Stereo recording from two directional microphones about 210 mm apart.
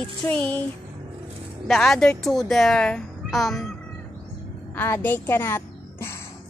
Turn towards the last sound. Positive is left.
turn(degrees=10)  # may be behind; listen again after turning